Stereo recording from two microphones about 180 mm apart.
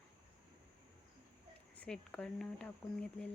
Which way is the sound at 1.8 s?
5° left (ahead or behind).